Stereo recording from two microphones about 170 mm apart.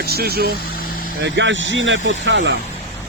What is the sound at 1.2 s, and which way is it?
Speech, 90° right.